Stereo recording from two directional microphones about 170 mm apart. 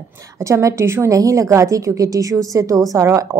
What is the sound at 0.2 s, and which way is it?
A woman's voice, 15° right (ahead or behind).